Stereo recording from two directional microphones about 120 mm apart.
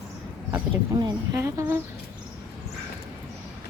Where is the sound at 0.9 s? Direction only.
30° right (ahead or behind).